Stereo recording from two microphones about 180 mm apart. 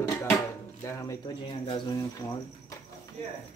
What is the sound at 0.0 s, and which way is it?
Speech, 15° left (ahead or behind).